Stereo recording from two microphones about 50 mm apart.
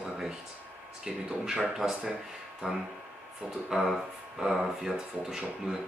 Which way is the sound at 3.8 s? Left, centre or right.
Centre.